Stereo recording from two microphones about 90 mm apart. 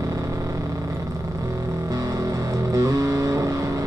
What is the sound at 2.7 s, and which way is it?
Music, 40° right (ahead or behind).